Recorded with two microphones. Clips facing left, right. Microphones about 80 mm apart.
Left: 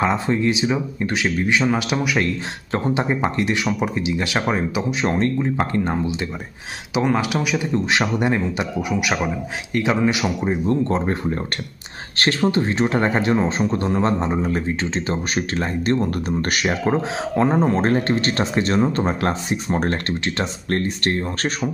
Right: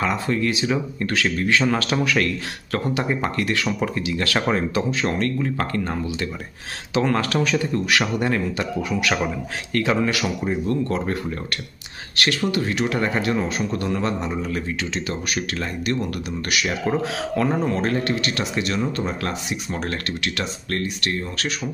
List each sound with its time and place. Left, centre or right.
0.0 s speech: left
5.0 s speech: left